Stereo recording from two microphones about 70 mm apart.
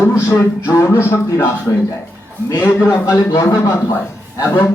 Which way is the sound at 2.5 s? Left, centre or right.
Left.